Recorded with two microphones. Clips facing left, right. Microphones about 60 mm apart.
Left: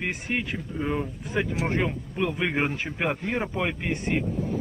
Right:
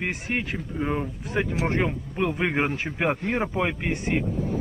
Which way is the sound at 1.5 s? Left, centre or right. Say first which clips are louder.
Right 3 dB; centre.